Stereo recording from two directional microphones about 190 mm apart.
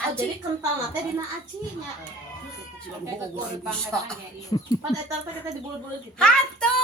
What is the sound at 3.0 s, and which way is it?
Speech, 10° right (ahead or behind).